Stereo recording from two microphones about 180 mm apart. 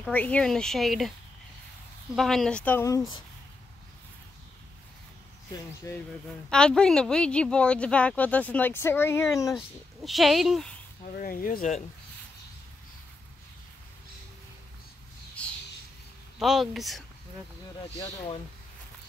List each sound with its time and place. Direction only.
0.0 s speech: 10° left (ahead or behind)
2.1 s speech: centre (ahead or behind)
5.9 s a woman's voice: 20° left (ahead or behind)
6.5 s a woman's voice: 5° left (ahead or behind)
10.0 s speech: centre (ahead or behind)
11.1 s speech: 50° left (ahead or behind)
16.3 s speech: centre (ahead or behind)